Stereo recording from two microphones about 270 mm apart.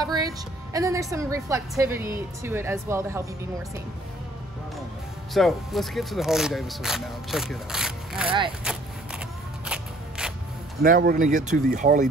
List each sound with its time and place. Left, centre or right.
0.0 s music: centre
0.7 s a woman's voice: centre
5.3 s speech: centre
8.7 s a sound: centre
10.8 s speech: right